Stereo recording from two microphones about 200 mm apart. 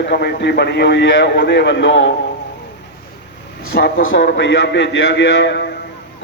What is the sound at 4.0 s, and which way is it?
A man's voice, 70° left (ahead or behind).